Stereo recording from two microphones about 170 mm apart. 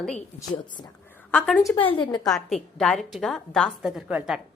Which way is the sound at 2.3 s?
Centre (ahead or behind).